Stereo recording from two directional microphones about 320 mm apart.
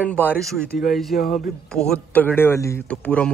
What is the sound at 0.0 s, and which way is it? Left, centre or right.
Speech, centre.